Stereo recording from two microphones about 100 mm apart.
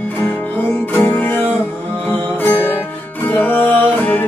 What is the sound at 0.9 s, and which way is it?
Music, 20° left (ahead or behind).